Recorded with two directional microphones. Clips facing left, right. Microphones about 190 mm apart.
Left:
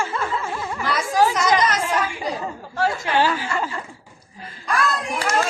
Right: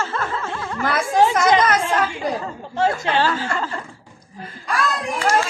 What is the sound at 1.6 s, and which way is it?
Chatter, 55° right (ahead or behind).